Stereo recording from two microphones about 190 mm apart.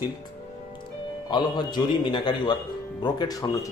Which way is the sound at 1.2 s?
25° left (ahead or behind).